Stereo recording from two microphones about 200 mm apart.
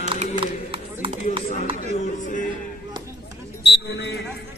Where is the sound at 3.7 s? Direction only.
60° left (ahead or behind).